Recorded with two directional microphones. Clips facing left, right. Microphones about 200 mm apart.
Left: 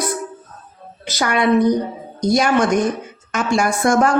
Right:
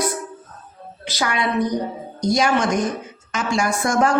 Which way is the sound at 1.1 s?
50° left (ahead or behind).